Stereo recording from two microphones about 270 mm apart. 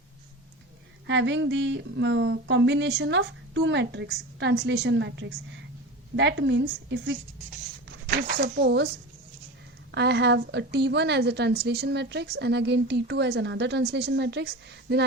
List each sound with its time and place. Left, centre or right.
1.0 s a woman's voice: right
9.9 s a woman's voice: right